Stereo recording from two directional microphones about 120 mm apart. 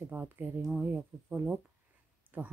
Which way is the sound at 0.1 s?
15° right (ahead or behind).